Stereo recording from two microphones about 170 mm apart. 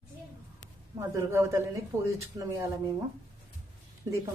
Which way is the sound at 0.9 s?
15° right (ahead or behind).